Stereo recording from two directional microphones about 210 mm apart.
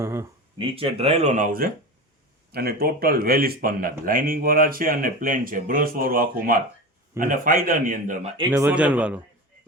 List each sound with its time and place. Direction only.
0.0 s speech: 10° right (ahead or behind)
0.6 s speech: 25° right (ahead or behind)
8.4 s a man's voice: 10° right (ahead or behind)